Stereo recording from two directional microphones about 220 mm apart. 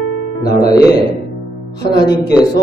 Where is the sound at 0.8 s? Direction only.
20° left (ahead or behind).